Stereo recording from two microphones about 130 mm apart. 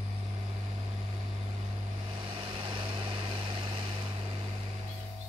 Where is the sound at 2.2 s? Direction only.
40° right (ahead or behind).